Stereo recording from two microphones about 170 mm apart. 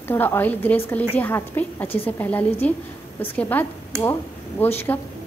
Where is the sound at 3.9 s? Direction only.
15° right (ahead or behind).